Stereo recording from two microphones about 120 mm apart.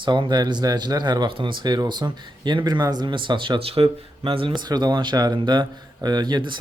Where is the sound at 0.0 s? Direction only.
40° right (ahead or behind).